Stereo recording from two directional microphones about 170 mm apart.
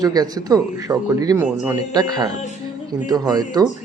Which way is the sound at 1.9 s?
25° right (ahead or behind).